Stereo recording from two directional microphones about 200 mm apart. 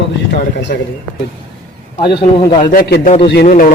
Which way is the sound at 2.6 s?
45° left (ahead or behind).